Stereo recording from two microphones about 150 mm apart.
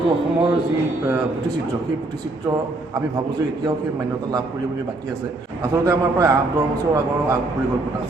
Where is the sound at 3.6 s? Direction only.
25° right (ahead or behind).